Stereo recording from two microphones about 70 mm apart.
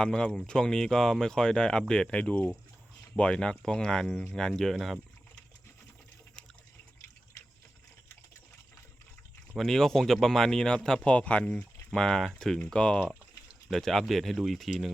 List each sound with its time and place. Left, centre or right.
0.0 s speech: centre
9.6 s speech: centre
11.9 s speech: centre
13.7 s speech: centre